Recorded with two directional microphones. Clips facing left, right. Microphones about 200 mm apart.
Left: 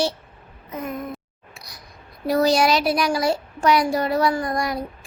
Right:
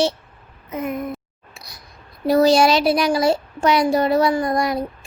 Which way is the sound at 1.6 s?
25° right (ahead or behind).